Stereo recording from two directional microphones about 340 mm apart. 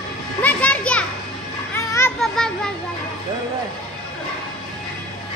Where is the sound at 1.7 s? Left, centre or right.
Centre.